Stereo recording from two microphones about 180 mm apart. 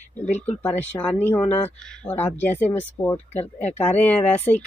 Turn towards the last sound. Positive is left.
turn(degrees=10)  # may be behind; listen again after turning